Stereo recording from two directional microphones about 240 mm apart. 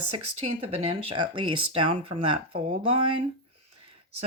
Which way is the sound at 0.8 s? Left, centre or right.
Right.